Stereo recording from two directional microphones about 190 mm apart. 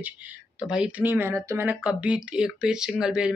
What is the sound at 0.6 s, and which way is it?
A woman's voice, 5° right (ahead or behind).